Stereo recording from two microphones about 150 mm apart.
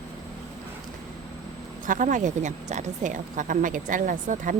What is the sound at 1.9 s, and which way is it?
A woman's voice, 60° right (ahead or behind).